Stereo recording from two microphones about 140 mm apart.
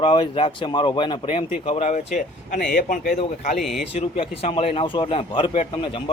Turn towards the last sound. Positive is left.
turn(degrees=40)  # may be behind; listen again after turning